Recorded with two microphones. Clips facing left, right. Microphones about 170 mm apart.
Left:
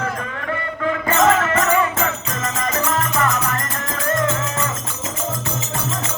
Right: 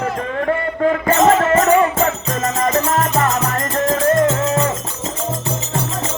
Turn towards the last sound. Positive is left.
turn(degrees=-30)  # may be behind; listen again after turning